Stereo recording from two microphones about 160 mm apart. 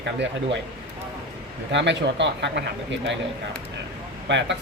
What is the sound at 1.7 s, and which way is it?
Speech, 90° right.